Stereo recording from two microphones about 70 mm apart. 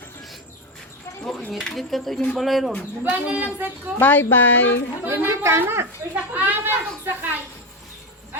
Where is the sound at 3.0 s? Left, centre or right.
Right.